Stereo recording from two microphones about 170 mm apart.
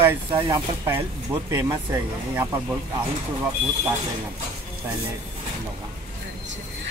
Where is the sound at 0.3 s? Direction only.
20° right (ahead or behind).